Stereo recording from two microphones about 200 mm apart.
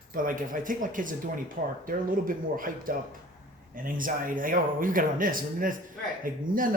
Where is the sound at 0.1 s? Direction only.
45° right (ahead or behind).